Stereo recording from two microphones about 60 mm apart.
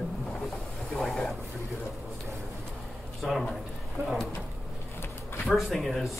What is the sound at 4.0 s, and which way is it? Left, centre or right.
Vehicle, right.